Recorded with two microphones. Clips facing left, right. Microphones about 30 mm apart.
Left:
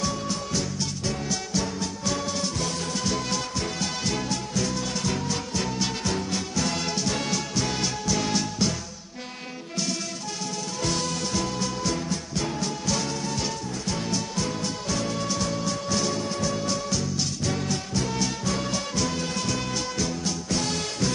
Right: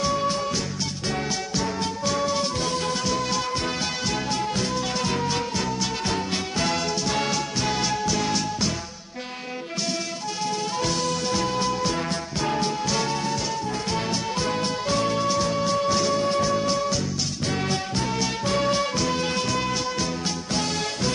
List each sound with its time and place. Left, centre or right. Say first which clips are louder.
0.0 s music: right 5 dB; right
2.0 s music: right 4 dB; centre
3.0 s music: right 3 dB; centre
5.0 s music: right 3 dB; right
7.1 s music: right 3 dB; centre
11.2 s music: right 4 dB; right
12.4 s music: right 7 dB; right
12.8 s music: right 3 dB; right
13.9 s music: right 1 dB; right
15.1 s music: right 5 dB; right
16.5 s music: right 4 dB; right
18.4 s music: right 5 dB; right